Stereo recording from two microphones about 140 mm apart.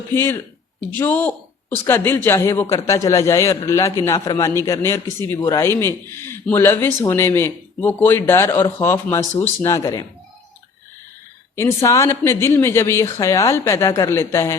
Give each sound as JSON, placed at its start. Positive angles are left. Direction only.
{"t": 0.1, "sound": "a man's voice", "side_deg": 15}
{"t": 11.5, "sound": "speech", "side_deg": 20}